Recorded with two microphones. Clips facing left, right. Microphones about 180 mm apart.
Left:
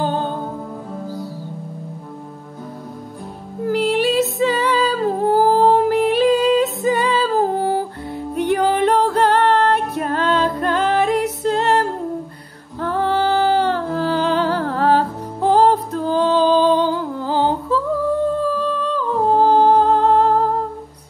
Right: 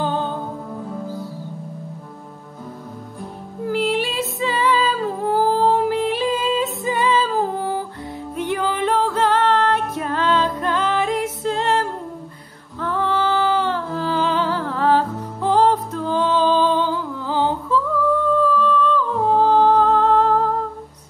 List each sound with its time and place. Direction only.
3.6 s music: 40° left (ahead or behind)
6.2 s music: 70° left (ahead or behind)
6.6 s music: 40° left (ahead or behind)
9.3 s music: 60° left (ahead or behind)
9.9 s music: 50° left (ahead or behind)
18.5 s humming: 35° left (ahead or behind)